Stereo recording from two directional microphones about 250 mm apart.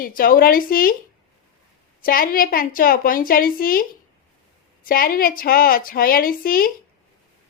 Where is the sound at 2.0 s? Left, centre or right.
Left.